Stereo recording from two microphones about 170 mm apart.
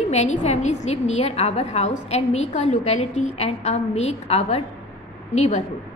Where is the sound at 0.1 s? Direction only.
40° left (ahead or behind).